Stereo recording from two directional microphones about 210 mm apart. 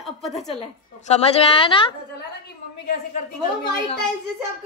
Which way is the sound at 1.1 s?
25° left (ahead or behind).